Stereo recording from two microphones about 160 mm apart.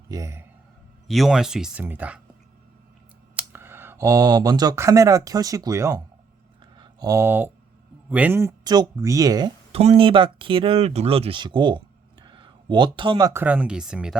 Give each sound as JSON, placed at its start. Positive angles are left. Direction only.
{"t": 0.1, "sound": "speech", "side_deg": -20}
{"t": 1.0, "sound": "speech", "side_deg": 0}
{"t": 3.3, "sound": "speech", "side_deg": -15}
{"t": 6.7, "sound": "a sound", "side_deg": -25}
{"t": 8.1, "sound": "speech", "side_deg": -10}
{"t": 9.7, "sound": "speech", "side_deg": -40}
{"t": 12.2, "sound": "a sound", "side_deg": -30}
{"t": 13.4, "sound": "speech", "side_deg": -10}